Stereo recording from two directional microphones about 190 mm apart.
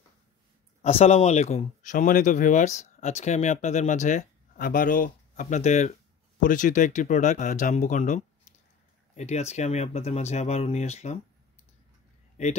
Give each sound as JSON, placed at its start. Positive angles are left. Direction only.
{"t": 0.8, "sound": "speech", "side_deg": 35}
{"t": 12.4, "sound": "speech", "side_deg": 40}